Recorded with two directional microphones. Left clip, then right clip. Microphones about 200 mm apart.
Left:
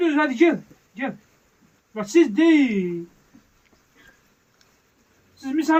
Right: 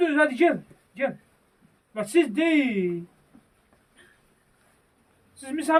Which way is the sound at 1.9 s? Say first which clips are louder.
Left 4 dB; 50° right (ahead or behind).